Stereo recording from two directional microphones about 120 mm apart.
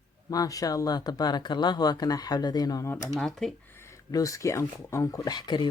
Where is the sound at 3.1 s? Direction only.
5° left (ahead or behind).